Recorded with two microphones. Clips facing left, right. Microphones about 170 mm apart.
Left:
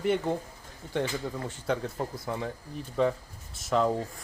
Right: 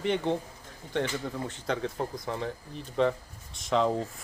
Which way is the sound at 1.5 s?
10° left (ahead or behind).